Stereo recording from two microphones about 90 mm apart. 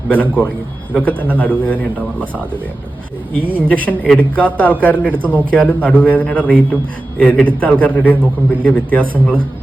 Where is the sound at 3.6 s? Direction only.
15° left (ahead or behind).